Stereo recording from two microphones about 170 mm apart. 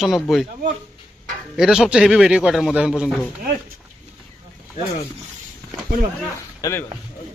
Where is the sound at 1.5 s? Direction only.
5° right (ahead or behind).